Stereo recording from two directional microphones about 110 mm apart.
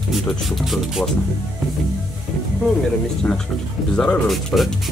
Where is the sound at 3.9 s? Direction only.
5° left (ahead or behind).